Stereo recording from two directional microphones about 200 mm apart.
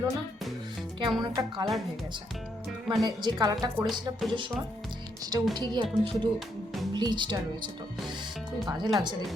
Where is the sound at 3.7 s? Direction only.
Centre (ahead or behind).